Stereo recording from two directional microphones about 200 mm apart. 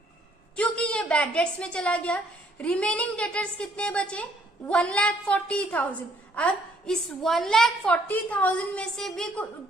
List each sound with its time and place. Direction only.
0.5 s a woman's voice: 5° left (ahead or behind)